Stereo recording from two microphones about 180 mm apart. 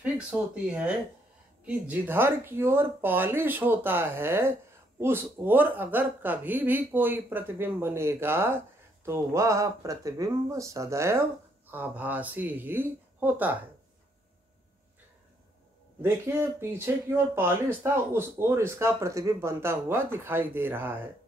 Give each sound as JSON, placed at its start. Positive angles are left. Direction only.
{"t": 0.0, "sound": "speech", "side_deg": -5}
{"t": 16.0, "sound": "speech", "side_deg": -15}